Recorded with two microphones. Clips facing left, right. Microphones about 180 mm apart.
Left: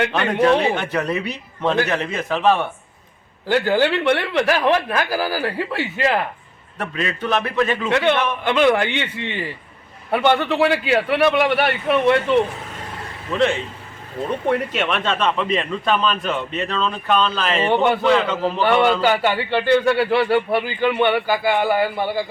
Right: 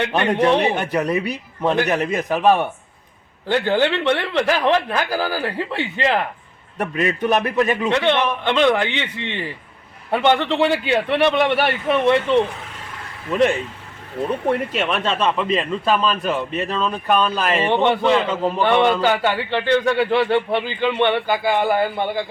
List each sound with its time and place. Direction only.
0.1 s a man's voice: 15° right (ahead or behind)
3.4 s a man's voice: 10° left (ahead or behind)
6.7 s a man's voice: 15° right (ahead or behind)
7.9 s a man's voice: 5° left (ahead or behind)
10.3 s a man's voice: 5° left (ahead or behind)
13.3 s a man's voice: 15° right (ahead or behind)
14.7 s a man's voice: centre (ahead or behind)
17.7 s a man's voice: 5° left (ahead or behind)
18.6 s a man's voice: 5° left (ahead or behind)